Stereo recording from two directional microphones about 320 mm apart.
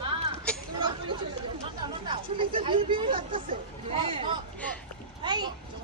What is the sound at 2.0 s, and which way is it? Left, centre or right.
Speech, centre.